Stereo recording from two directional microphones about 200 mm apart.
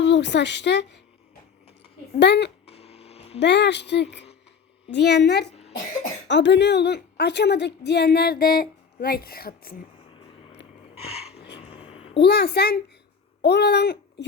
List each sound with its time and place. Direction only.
0.0 s speech: 60° left (ahead or behind)
2.1 s a woman's voice: 60° left (ahead or behind)
2.6 s a sound: 30° left (ahead or behind)
3.4 s a woman's voice: 60° left (ahead or behind)
10.9 s a sound: 30° left (ahead or behind)
12.2 s a child's voice: 50° left (ahead or behind)